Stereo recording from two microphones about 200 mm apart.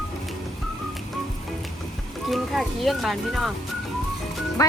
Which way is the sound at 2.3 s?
Centre (ahead or behind).